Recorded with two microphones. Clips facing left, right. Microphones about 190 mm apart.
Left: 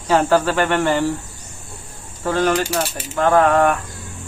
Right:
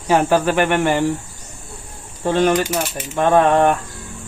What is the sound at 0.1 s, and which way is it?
Speech, 15° right (ahead or behind).